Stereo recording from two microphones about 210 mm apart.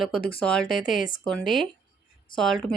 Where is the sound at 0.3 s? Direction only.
5° left (ahead or behind).